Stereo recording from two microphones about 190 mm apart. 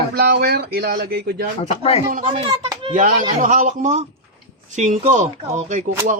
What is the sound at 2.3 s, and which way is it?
Speech, 25° right (ahead or behind).